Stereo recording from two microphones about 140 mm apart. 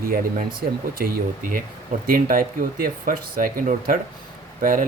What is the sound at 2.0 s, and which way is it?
Speech, 90° right.